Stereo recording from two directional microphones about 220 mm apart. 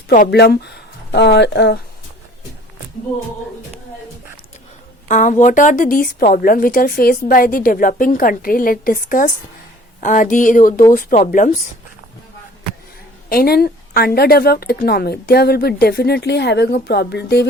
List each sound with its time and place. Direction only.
0.3 s speech: 45° left (ahead or behind)
5.0 s a woman's voice: 35° left (ahead or behind)
13.3 s a woman's voice: 45° left (ahead or behind)